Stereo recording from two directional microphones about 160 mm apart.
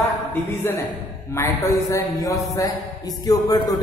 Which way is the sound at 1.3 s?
15° left (ahead or behind).